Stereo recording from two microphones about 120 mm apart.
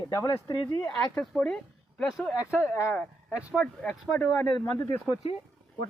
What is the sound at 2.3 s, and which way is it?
Speech, 20° left (ahead or behind).